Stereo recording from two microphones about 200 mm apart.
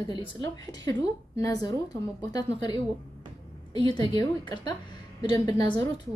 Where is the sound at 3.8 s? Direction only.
20° left (ahead or behind).